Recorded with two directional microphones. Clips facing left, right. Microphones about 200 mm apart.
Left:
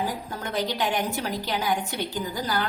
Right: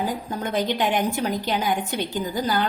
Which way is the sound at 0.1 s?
20° right (ahead or behind).